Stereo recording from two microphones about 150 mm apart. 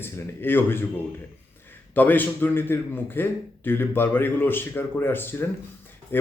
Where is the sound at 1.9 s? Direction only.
10° left (ahead or behind).